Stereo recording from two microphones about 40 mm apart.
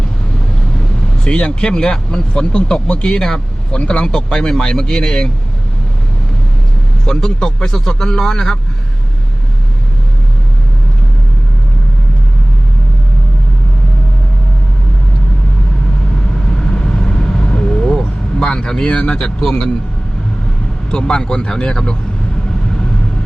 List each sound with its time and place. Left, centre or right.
1.2 s speech: left
3.8 s speech: left
4.0 s speech: centre
7.0 s speech: centre
16.5 s vehicle: centre
18.9 s speech: left
20.9 s speech: left